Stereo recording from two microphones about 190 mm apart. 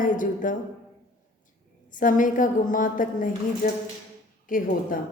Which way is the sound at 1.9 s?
45° left (ahead or behind).